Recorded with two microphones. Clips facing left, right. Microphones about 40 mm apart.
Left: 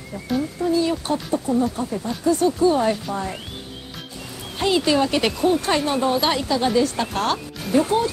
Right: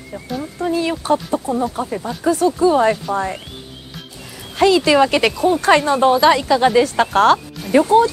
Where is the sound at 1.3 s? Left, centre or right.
Right.